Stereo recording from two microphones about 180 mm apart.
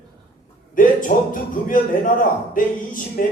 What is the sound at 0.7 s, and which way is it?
Speech, 45° left (ahead or behind).